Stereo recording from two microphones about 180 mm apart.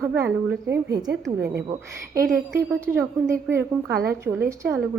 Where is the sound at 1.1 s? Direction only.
70° right (ahead or behind).